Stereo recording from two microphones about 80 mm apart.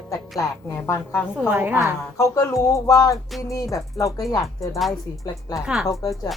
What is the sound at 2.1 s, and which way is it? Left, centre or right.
Speech, left.